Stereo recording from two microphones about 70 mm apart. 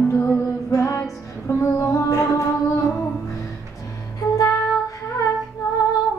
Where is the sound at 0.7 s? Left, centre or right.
Left.